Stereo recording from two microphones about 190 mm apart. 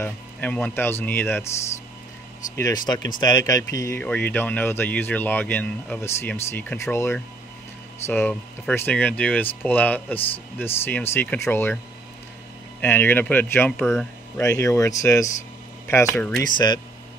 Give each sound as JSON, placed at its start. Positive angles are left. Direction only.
{"t": 0.0, "sound": "speech", "side_deg": 10}
{"t": 2.5, "sound": "speech", "side_deg": 15}
{"t": 12.8, "sound": "speech", "side_deg": 10}
{"t": 16.5, "sound": "speech", "side_deg": 25}